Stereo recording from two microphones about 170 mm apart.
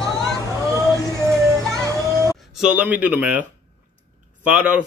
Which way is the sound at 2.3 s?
Centre (ahead or behind).